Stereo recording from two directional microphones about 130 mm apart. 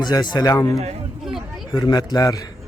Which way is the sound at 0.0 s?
35° left (ahead or behind).